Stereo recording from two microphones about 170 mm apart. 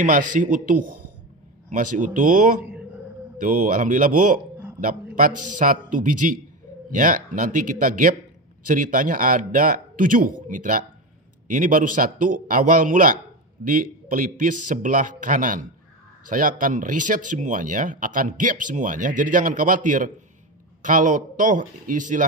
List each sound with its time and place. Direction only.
0.0 s speech: 50° right (ahead or behind)